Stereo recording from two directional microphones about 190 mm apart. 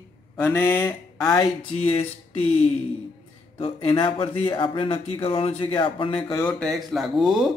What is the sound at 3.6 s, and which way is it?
Speech, 25° left (ahead or behind).